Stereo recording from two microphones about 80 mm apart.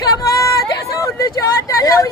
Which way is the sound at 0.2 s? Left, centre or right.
Left.